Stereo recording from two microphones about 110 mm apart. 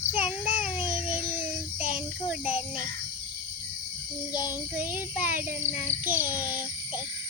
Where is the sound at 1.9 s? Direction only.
15° right (ahead or behind).